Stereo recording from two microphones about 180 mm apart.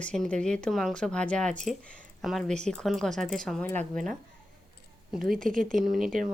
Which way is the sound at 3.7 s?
45° right (ahead or behind).